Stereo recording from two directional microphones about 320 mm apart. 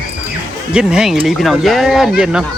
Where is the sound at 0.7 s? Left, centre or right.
Centre.